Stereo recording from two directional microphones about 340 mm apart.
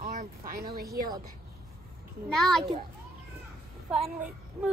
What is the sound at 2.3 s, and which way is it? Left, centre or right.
Speech, centre.